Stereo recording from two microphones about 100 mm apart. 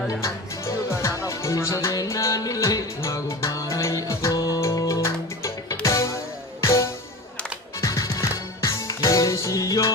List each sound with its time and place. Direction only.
0.2 s music: 30° left (ahead or behind)